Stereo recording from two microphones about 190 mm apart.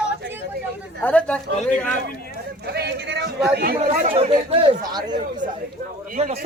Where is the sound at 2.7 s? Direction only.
60° right (ahead or behind).